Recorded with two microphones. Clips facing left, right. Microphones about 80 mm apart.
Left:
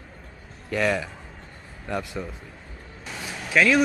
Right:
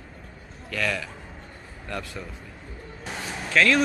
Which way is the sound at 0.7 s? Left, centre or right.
Left.